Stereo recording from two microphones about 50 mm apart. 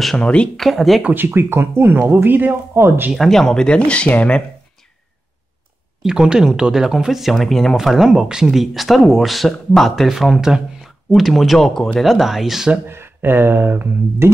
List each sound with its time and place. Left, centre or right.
0.2 s speech: left
0.6 s speech: centre
1.1 s speech: right
2.2 s speech: right
2.8 s speech: right
3.2 s speech: centre
3.6 s speech: left
6.0 s speech: centre
7.7 s speech: centre
12.8 s speech: right
14.2 s speech: right